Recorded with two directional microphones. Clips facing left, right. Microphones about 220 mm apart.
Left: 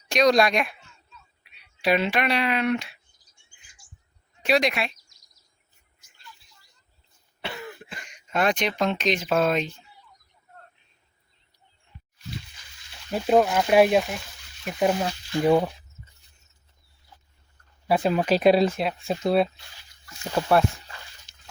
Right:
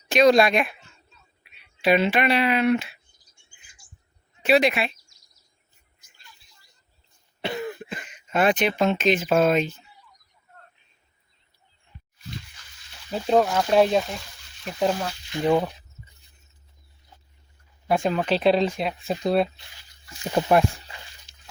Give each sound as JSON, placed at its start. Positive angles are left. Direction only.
{"t": 0.1, "sound": "speech", "side_deg": -5}
{"t": 4.4, "sound": "speech", "side_deg": -5}
{"t": 8.0, "sound": "speech", "side_deg": -5}
{"t": 13.1, "sound": "speech", "side_deg": 10}
{"t": 17.8, "sound": "speech", "side_deg": 5}
{"t": 20.1, "sound": "speech", "side_deg": -15}